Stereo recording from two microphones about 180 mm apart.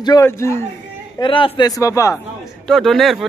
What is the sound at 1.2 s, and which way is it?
A man's voice, 25° left (ahead or behind).